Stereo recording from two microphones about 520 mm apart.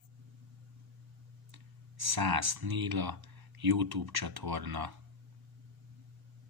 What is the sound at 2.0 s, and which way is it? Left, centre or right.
Speech, right.